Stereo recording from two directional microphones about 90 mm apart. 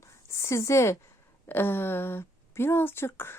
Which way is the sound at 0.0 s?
35° left (ahead or behind).